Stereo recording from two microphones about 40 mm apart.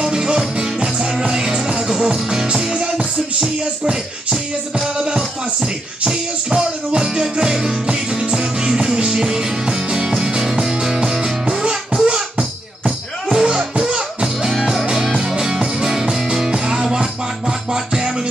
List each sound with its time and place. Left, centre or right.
0.0 s music: centre
13.6 s music: right
13.9 s music: centre